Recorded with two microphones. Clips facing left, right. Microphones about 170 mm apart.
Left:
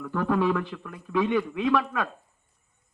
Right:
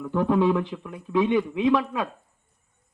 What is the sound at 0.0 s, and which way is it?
A man's voice, 20° right (ahead or behind).